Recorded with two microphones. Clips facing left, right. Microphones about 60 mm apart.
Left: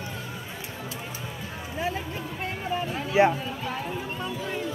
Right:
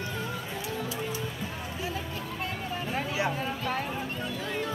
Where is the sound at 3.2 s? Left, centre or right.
Left.